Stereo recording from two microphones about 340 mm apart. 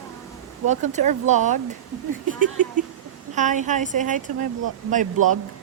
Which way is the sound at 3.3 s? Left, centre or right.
Right.